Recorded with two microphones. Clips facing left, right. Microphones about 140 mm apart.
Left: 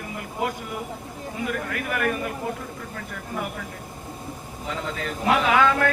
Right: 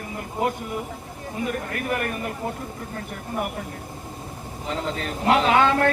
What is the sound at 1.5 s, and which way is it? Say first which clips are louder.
Speech: right 2 dB; 35° right (ahead or behind).